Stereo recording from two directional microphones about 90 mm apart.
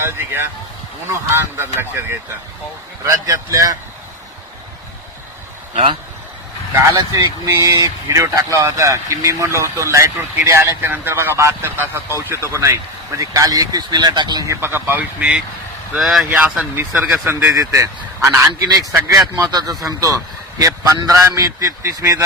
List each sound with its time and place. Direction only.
0.0 s speech: 25° right (ahead or behind)
3.0 s a man's voice: 35° right (ahead or behind)
6.9 s a man's voice: 45° right (ahead or behind)
10.8 s a man's voice: 20° right (ahead or behind); by 14.4 s 50° right (ahead or behind)
14.4 s speech: 30° right (ahead or behind); by 15.4 s 15° right (ahead or behind)
16.0 s speech: centre (ahead or behind)
16.3 s speech: 15° right (ahead or behind)
17.5 s a man's voice: 40° right (ahead or behind)
19.4 s a man's voice: 45° right (ahead or behind)